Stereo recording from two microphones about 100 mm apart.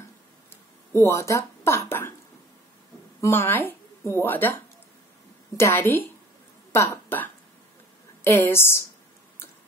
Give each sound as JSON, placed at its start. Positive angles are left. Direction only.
{"t": 1.0, "sound": "speech", "side_deg": 30}
{"t": 3.2, "sound": "speech", "side_deg": 25}
{"t": 5.6, "sound": "speech", "side_deg": 25}